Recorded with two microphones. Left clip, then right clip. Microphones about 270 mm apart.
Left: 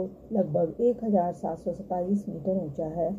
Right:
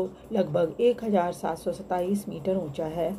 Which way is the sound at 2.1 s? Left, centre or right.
Right.